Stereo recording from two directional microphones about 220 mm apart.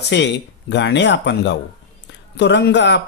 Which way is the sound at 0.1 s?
55° left (ahead or behind).